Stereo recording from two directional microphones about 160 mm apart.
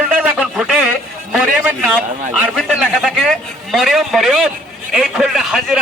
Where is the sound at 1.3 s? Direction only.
5° right (ahead or behind).